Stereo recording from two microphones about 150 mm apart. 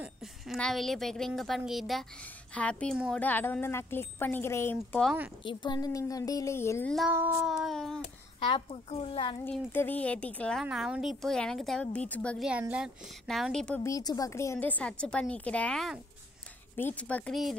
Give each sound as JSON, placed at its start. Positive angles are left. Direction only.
{"t": 0.0, "sound": "a woman's voice", "side_deg": 0}
{"t": 5.4, "sound": "a woman's voice", "side_deg": 30}
{"t": 7.1, "sound": "child singing", "side_deg": -15}
{"t": 7.4, "sound": "a woman's voice", "side_deg": 0}
{"t": 8.4, "sound": "a child's voice", "side_deg": 35}
{"t": 9.4, "sound": "a woman's voice", "side_deg": 15}
{"t": 10.6, "sound": "a woman's voice", "side_deg": -5}
{"t": 12.4, "sound": "a woman's voice", "side_deg": -10}
{"t": 13.8, "sound": "a woman's voice", "side_deg": 25}